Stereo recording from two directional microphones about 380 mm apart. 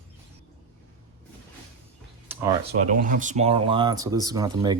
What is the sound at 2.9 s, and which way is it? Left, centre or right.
Speech, right.